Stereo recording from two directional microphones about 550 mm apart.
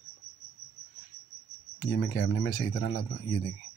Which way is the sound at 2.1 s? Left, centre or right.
Centre.